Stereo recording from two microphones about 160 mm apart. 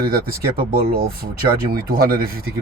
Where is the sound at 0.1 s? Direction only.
70° right (ahead or behind).